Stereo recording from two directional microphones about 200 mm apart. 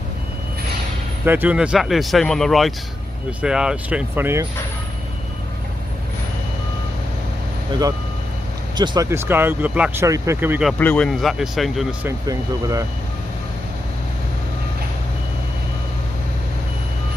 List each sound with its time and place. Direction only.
1.2 s speech: 10° right (ahead or behind)
8.7 s speech: 20° right (ahead or behind)
9.0 s speech: 10° right (ahead or behind)
10.8 s speech: 5° left (ahead or behind)
12.0 s speech: 15° right (ahead or behind)